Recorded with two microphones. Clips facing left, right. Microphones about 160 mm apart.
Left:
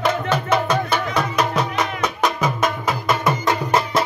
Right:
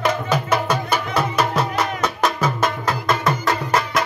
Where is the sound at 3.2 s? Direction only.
15° left (ahead or behind).